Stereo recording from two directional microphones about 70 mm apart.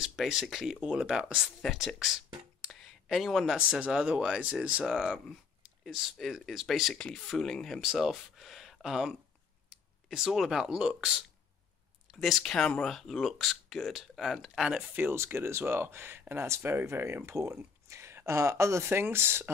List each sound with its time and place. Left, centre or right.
0.0 s speech: centre
2.6 s a sound: centre
3.4 s speech: centre
7.0 s speech: centre
7.8 s speech: centre
12.1 s speech: centre
14.8 s speech: right